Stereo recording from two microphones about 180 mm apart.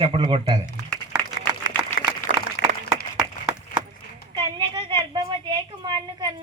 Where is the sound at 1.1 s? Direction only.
5° right (ahead or behind).